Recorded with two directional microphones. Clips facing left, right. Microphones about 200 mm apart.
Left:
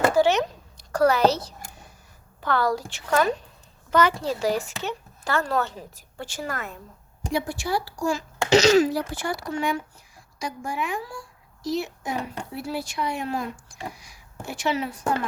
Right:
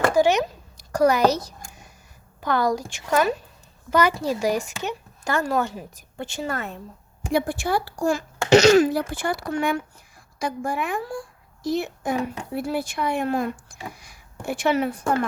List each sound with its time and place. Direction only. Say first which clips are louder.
0.1 s a sound: right 1 dB; 15° right (ahead or behind)
2.4 s a woman's voice: right 2 dB; 15° right (ahead or behind)
7.3 s speech: right 4 dB; 55° right (ahead or behind)